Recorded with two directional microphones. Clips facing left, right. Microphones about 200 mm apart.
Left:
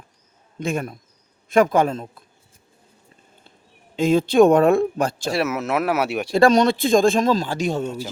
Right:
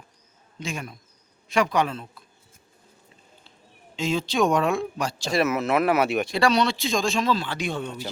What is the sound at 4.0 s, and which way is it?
Speech, 55° left (ahead or behind).